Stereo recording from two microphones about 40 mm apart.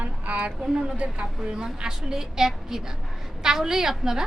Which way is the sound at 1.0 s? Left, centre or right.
Right.